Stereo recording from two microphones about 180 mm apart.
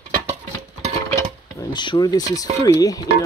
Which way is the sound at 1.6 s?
25° left (ahead or behind).